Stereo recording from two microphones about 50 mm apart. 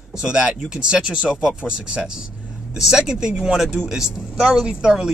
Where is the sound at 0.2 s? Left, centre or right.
Centre.